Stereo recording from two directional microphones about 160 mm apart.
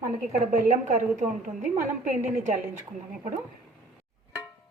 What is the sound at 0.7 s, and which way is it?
A woman's voice, 50° right (ahead or behind).